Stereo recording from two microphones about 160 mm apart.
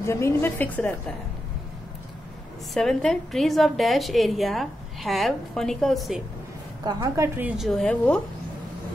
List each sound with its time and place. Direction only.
0.0 s a woman's voice: 15° left (ahead or behind)
2.7 s a woman's voice: centre (ahead or behind)
6.8 s a woman's voice: 25° right (ahead or behind)
7.3 s a woman's voice: 5° right (ahead or behind)